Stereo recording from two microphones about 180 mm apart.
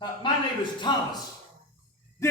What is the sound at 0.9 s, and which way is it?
Speech, 25° left (ahead or behind).